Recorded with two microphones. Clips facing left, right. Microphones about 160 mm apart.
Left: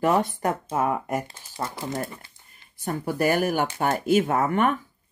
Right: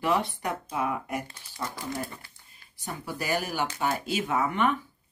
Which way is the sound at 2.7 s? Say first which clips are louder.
Left 8 dB; 55° left (ahead or behind).